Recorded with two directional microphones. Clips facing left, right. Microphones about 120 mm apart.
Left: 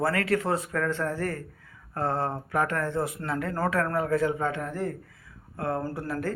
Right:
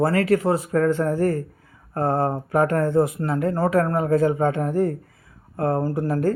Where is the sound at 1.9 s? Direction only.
45° right (ahead or behind).